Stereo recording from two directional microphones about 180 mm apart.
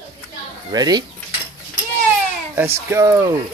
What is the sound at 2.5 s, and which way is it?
Speech, 15° right (ahead or behind).